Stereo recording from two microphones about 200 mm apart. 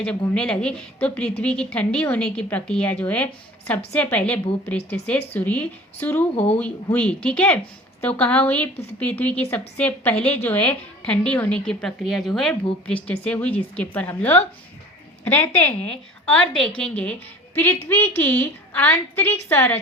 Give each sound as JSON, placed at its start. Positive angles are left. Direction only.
{"t": 0.0, "sound": "a woman's voice", "side_deg": 5}
{"t": 6.3, "sound": "speech", "side_deg": 30}
{"t": 6.6, "sound": "a woman's voice", "side_deg": 5}